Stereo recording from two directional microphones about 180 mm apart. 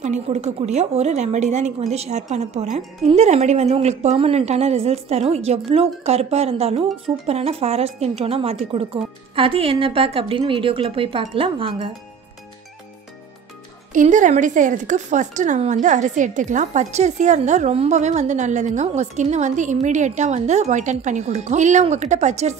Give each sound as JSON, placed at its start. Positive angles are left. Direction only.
{"t": 0.0, "sound": "speech", "side_deg": -40}
{"t": 13.9, "sound": "speech", "side_deg": -45}